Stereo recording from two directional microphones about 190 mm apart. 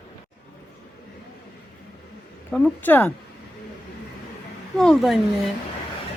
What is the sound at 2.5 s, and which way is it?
Speech, 5° left (ahead or behind).